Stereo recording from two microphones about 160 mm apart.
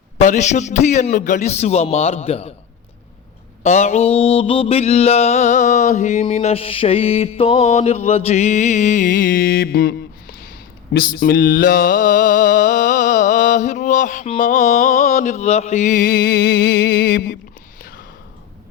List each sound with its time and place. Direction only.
0.2 s mantra: 45° left (ahead or behind)
3.6 s mantra: 45° left (ahead or behind); by 17.3 s 70° left (ahead or behind)